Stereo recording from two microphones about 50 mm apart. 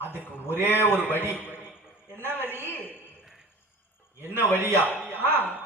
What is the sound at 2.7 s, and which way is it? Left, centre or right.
Speech, left.